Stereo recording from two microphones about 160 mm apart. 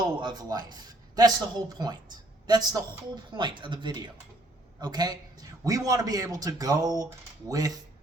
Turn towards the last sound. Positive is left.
turn(degrees=-20)  # may be behind; listen again after turning